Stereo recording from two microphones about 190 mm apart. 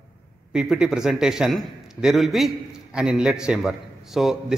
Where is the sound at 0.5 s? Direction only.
5° right (ahead or behind).